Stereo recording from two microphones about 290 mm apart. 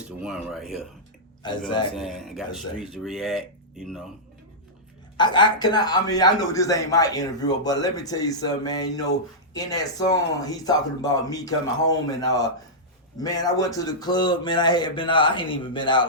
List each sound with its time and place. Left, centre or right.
0.0 s speech: centre
1.4 s a man's voice: centre
2.0 s speech: centre
5.1 s a man's voice: centre